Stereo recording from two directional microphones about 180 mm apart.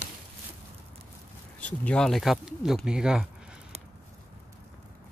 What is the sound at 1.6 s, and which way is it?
Speech, 5° left (ahead or behind).